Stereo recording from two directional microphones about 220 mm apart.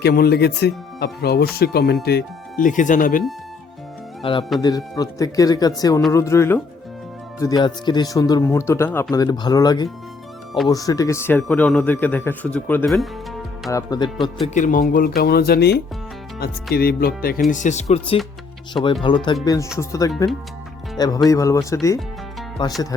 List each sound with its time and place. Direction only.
0.0 s speech: 45° left (ahead or behind)
4.2 s a man's voice: 25° left (ahead or behind); by 13.1 s centre (ahead or behind)
13.7 s a man's voice: 15° left (ahead or behind)
14.4 s a man's voice: 35° left (ahead or behind)